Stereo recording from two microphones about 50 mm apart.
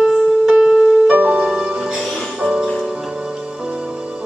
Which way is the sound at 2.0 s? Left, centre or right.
Centre.